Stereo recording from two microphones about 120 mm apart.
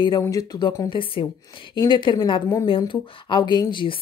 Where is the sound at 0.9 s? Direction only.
45° left (ahead or behind).